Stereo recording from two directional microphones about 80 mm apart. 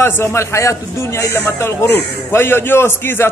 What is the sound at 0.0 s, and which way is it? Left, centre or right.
A man's voice, left.